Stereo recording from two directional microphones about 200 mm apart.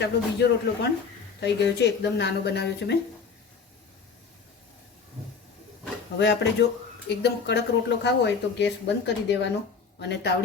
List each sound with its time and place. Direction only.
0.0 s speech: 55° left (ahead or behind)
6.1 s speech: 60° left (ahead or behind)